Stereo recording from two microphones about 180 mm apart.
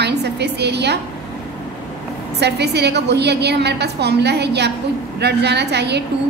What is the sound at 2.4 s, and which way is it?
A woman's voice, 70° right (ahead or behind).